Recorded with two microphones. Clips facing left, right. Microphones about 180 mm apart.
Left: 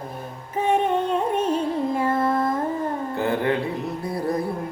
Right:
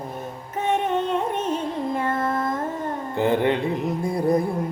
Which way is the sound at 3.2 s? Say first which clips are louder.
Right 3 dB; 20° right (ahead or behind).